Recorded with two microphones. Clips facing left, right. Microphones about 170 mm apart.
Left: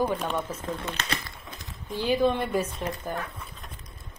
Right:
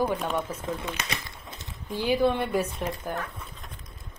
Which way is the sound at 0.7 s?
10° right (ahead or behind).